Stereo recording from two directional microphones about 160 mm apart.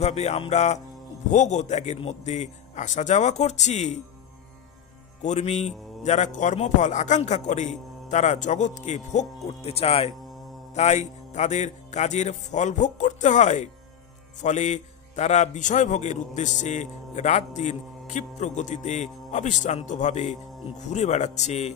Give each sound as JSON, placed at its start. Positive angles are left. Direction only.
{"t": 0.0, "sound": "a man's voice", "side_deg": 40}
{"t": 5.2, "sound": "a man's voice", "side_deg": 45}